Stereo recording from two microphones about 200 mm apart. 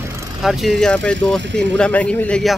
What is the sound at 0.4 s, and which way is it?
Speech, centre (ahead or behind).